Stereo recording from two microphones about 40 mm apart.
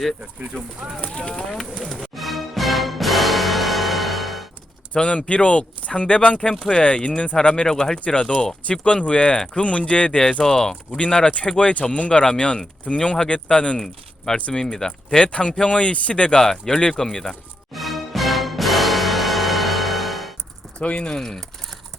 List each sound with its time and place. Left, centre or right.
0.3 s speech: right
1.0 s speech: left
2.0 s music: centre
4.9 s speech: left
7.7 s speech: centre
8.7 s speech: left
11.7 s speech: left
13.7 s speech: centre
14.3 s speech: left
14.6 s speech: centre
16.4 s speech: centre
17.7 s music: centre
20.8 s speech: left
21.1 s speech: centre